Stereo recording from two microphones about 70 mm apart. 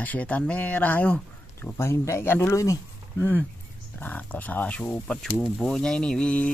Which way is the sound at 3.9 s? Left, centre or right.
Left.